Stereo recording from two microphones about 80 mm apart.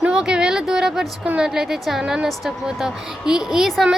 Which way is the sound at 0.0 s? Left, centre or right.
Centre.